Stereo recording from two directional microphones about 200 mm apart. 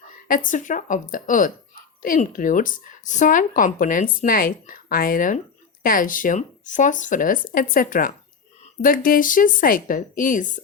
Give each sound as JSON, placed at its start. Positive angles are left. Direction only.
{"t": 0.3, "sound": "a woman's voice", "side_deg": 40}